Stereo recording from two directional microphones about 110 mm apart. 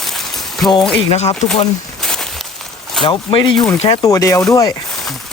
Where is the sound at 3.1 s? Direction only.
45° left (ahead or behind).